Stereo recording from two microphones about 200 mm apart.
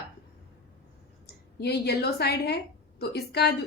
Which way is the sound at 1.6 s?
55° left (ahead or behind).